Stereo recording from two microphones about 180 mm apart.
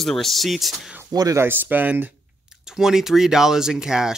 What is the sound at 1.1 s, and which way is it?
Speech, 20° right (ahead or behind).